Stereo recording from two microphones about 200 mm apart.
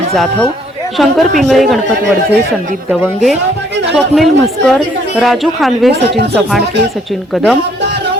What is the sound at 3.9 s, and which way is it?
Speech, centre (ahead or behind).